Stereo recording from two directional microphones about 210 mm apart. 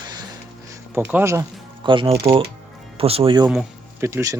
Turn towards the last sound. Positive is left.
turn(degrees=-15)  # may be behind; listen again after turning